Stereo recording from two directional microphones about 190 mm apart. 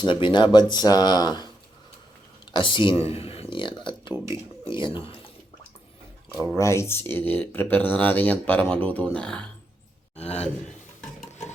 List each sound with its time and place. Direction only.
0.0 s speech: 25° left (ahead or behind)
2.5 s speech: 25° left (ahead or behind)
4.1 s speech: 15° right (ahead or behind)
4.7 s speech: 25° left (ahead or behind)
6.6 s speech: 15° left (ahead or behind)
10.2 s speech: 35° left (ahead or behind)
11.3 s stir: 35° left (ahead or behind)